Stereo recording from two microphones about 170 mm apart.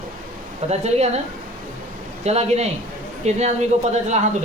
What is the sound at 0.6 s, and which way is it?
Speech, 40° right (ahead or behind).